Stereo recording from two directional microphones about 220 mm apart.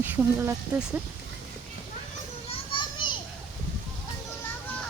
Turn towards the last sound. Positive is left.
turn(degrees=20)  # may be behind; listen again after turning